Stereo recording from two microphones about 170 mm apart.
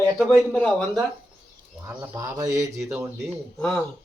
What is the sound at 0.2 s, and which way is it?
Speech, 5° left (ahead or behind).